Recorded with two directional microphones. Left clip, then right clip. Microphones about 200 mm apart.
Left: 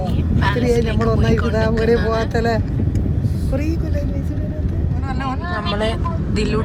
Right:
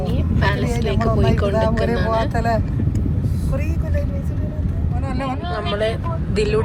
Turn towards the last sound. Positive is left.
turn(degrees=0)  # may be behind; listen again after turning